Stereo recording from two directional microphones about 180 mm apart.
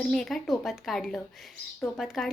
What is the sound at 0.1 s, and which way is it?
Speech, centre (ahead or behind).